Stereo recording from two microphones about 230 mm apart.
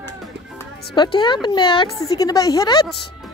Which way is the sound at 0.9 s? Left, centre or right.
Centre.